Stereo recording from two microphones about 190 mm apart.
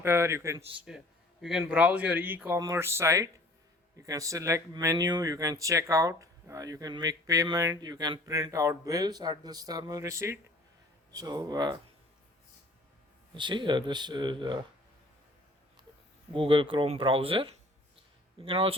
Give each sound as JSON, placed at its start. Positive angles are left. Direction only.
{"t": 0.0, "sound": "speech", "side_deg": -15}
{"t": 0.8, "sound": "speech", "side_deg": -5}
{"t": 13.3, "sound": "speech", "side_deg": -25}
{"t": 16.3, "sound": "speech", "side_deg": -25}